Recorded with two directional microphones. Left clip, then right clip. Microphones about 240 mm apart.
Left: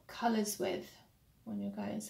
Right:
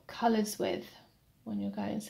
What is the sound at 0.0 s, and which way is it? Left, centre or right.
Speech, right.